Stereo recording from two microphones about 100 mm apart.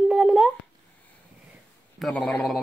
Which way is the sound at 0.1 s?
5° right (ahead or behind).